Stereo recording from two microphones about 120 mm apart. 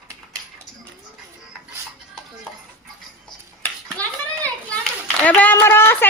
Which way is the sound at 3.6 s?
15° left (ahead or behind).